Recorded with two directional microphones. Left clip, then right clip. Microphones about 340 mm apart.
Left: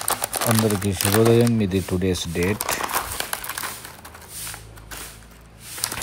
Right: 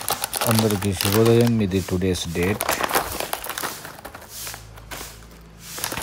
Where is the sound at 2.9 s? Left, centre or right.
Right.